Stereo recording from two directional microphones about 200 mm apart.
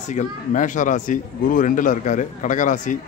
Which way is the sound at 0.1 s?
40° left (ahead or behind).